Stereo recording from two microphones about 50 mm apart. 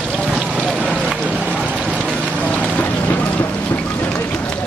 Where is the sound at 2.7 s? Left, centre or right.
Left.